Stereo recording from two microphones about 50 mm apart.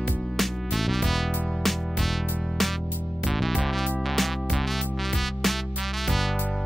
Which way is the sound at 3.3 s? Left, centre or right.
Centre.